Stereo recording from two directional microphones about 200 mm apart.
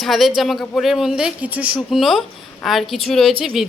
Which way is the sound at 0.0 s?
Centre (ahead or behind).